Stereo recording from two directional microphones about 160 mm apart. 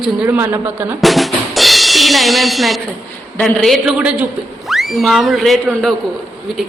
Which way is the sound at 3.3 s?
5° left (ahead or behind).